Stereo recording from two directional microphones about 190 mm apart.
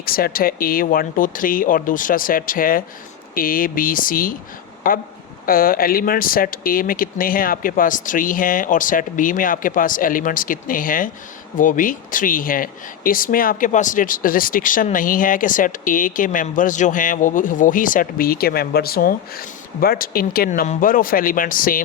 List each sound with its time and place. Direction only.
0.0 s speech: 50° left (ahead or behind)